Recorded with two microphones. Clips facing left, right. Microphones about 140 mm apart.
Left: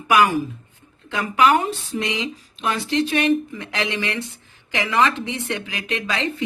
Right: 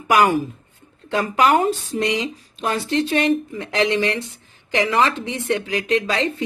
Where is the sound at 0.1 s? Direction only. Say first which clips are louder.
Right 1 dB; 40° right (ahead or behind).